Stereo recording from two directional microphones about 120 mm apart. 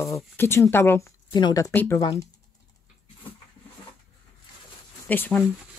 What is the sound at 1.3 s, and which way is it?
Speech, 35° left (ahead or behind).